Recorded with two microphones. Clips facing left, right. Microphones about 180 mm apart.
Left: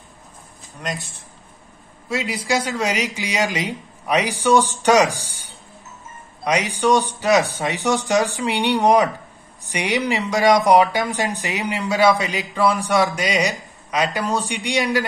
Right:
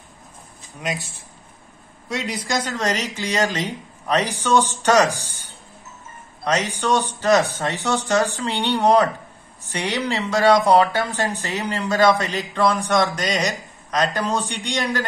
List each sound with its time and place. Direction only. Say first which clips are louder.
0.7 s speech: right 1 dB; 5° right (ahead or behind)
2.0 s speech: left 3 dB; centre (ahead or behind)
6.4 s speech: left 3 dB; 15° left (ahead or behind)